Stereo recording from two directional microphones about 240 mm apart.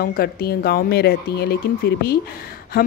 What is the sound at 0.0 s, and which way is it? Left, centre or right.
Speech, left.